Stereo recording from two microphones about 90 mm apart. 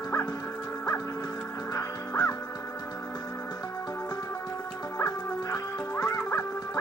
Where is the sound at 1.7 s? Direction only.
40° left (ahead or behind).